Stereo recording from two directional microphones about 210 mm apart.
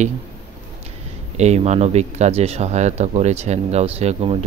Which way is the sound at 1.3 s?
30° right (ahead or behind).